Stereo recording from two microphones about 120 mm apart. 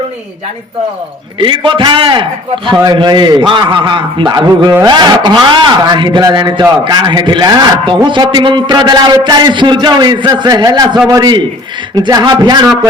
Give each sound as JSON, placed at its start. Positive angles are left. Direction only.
{"t": 1.4, "sound": "a man's voice", "side_deg": -45}